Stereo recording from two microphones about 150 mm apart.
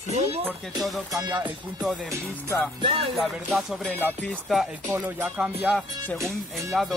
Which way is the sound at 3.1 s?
5° right (ahead or behind).